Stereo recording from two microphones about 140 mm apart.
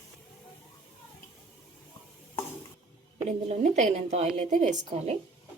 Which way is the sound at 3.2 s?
55° right (ahead or behind).